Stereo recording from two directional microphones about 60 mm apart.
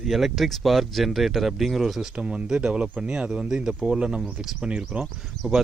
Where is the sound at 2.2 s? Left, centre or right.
Centre.